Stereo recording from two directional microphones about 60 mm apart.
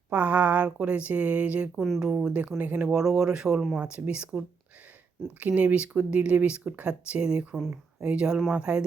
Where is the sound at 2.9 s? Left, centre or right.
Centre.